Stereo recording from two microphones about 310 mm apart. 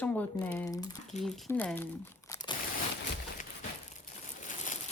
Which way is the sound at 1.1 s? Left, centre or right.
Left.